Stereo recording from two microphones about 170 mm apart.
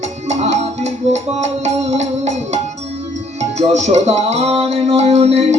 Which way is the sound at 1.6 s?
40° right (ahead or behind).